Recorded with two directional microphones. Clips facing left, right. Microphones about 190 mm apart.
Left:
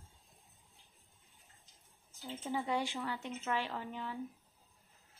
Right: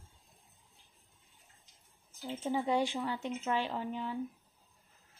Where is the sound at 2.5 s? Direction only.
20° right (ahead or behind).